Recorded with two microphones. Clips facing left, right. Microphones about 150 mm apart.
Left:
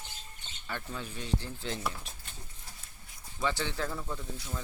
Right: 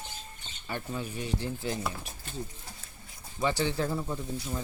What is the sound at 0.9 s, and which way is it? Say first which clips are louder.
Stir: right 2 dB; 10° right (ahead or behind).